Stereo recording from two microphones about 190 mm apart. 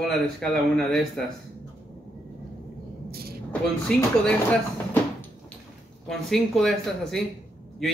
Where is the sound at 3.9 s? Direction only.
5° left (ahead or behind).